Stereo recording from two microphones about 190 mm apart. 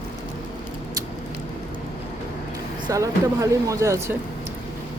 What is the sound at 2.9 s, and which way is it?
Speech, 15° right (ahead or behind).